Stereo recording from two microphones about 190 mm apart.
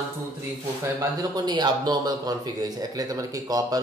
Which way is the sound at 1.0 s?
20° right (ahead or behind).